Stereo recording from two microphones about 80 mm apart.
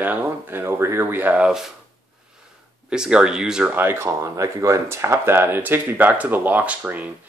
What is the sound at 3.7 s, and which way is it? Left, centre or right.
Speech, right.